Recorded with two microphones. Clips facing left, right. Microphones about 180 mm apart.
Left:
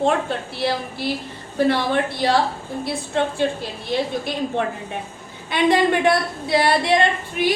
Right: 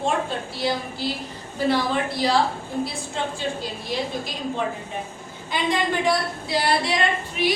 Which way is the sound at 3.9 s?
60° left (ahead or behind).